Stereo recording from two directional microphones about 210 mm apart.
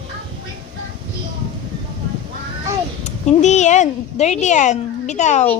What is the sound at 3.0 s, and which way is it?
Speech, 35° left (ahead or behind).